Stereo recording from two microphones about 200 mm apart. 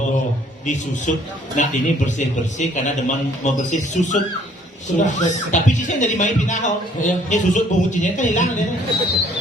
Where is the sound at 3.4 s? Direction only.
35° left (ahead or behind).